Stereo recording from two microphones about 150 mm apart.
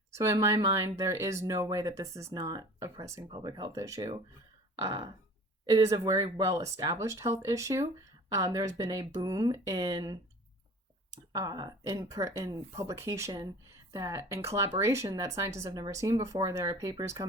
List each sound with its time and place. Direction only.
0.1 s speech: 20° right (ahead or behind)